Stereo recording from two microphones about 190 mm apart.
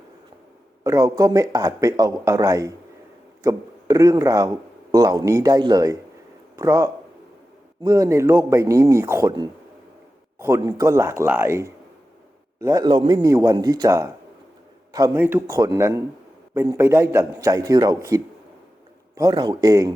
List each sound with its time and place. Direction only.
0.9 s a man's voice: 15° right (ahead or behind)